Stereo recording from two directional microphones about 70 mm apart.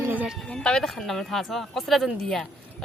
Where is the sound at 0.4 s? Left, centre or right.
Centre.